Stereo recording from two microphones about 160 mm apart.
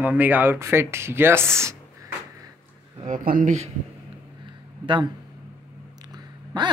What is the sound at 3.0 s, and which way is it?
Speech, 55° right (ahead or behind).